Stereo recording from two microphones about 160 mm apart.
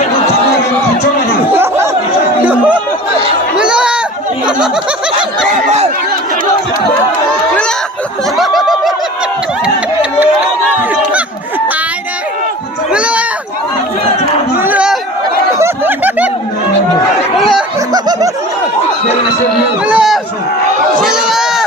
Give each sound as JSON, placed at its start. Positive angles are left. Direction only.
{"t": 1.5, "sound": "chatter", "side_deg": -15}
{"t": 3.6, "sound": "a sound", "side_deg": -5}
{"t": 4.4, "sound": "speech", "side_deg": -5}
{"t": 8.4, "sound": "snicker", "side_deg": 0}
{"t": 12.9, "sound": "a sound", "side_deg": -5}
{"t": 14.6, "sound": "chatter", "side_deg": -10}
{"t": 15.5, "sound": "snicker", "side_deg": -15}
{"t": 17.7, "sound": "snicker", "side_deg": -25}
{"t": 19.8, "sound": "chatter", "side_deg": -5}
{"t": 21.0, "sound": "a sound", "side_deg": -5}